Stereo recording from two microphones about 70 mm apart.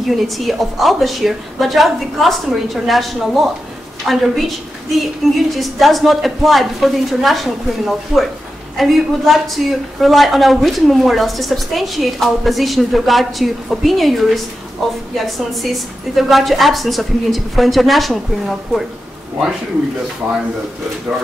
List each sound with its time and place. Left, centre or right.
0.1 s a woman's voice: centre
20.2 s speech: right